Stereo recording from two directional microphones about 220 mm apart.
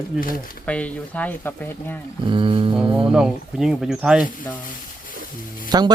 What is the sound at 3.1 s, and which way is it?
Speech, 5° right (ahead or behind).